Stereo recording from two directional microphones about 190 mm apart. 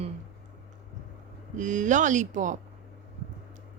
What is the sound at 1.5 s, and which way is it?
Speech, 40° right (ahead or behind).